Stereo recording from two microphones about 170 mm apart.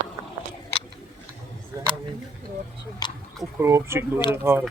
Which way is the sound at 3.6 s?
15° right (ahead or behind).